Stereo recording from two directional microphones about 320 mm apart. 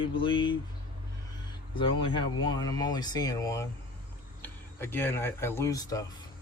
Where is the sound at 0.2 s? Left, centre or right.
Centre.